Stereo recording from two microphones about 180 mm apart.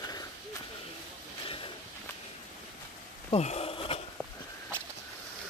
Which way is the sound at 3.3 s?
35° left (ahead or behind).